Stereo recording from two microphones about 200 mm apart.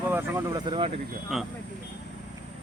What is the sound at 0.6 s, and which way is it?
Speech, 25° right (ahead or behind).